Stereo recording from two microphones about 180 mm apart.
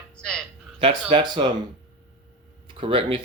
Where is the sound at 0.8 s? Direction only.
30° right (ahead or behind).